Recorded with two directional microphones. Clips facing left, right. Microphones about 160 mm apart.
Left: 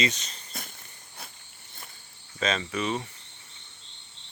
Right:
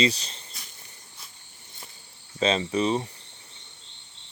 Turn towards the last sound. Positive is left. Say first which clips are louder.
# right 5 dB
turn(degrees=-30)  # may be behind; listen again after turning